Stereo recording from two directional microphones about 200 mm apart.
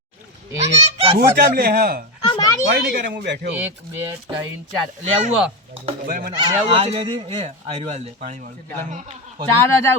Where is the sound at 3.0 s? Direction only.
55° right (ahead or behind).